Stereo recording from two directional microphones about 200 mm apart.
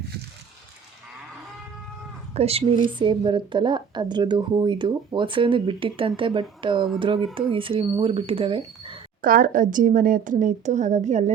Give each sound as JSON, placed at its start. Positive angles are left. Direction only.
{"t": 2.3, "sound": "a woman's voice", "side_deg": -30}
{"t": 9.2, "sound": "a woman's voice", "side_deg": -45}